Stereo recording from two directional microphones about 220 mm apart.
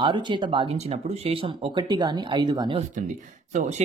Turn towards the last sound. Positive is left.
turn(degrees=-30)  # may be behind; listen again after turning